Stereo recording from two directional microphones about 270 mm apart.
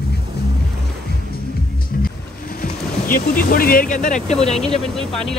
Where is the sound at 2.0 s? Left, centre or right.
Left.